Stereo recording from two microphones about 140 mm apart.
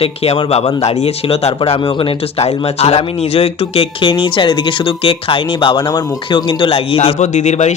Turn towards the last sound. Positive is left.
turn(degrees=55)  # may be behind; listen again after turning